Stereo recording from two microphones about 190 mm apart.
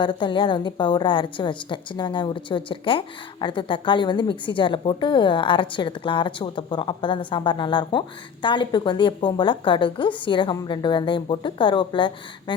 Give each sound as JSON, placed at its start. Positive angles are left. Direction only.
{"t": 0.0, "sound": "a woman's voice", "side_deg": 25}